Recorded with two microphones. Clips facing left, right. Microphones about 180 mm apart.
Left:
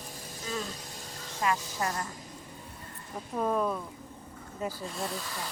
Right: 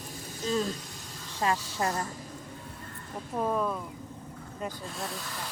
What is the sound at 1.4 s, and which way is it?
Speech, 30° right (ahead or behind).